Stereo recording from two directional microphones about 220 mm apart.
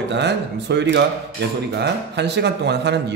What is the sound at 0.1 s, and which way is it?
Speech, 50° right (ahead or behind).